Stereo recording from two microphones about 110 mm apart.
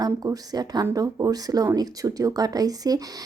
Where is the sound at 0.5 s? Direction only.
35° right (ahead or behind).